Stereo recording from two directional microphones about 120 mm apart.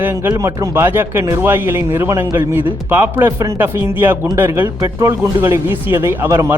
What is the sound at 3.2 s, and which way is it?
A man's voice, 25° right (ahead or behind).